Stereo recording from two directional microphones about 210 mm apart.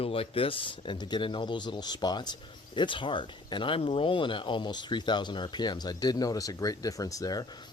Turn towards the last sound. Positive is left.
turn(degrees=15)  # may be behind; listen again after turning